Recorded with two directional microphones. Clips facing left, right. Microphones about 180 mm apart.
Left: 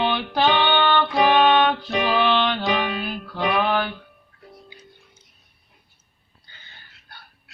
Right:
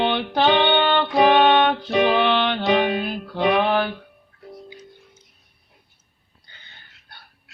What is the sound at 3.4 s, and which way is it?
Mantra, 25° right (ahead or behind).